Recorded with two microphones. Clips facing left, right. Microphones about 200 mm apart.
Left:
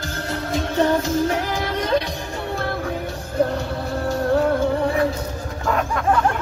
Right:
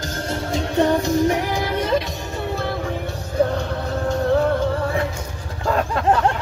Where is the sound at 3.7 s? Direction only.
5° left (ahead or behind).